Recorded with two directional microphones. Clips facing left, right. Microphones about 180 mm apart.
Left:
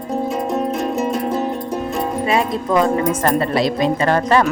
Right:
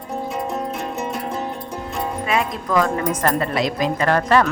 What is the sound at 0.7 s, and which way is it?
Music, 40° left (ahead or behind).